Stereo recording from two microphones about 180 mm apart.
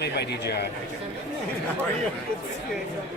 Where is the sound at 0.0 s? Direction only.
65° left (ahead or behind).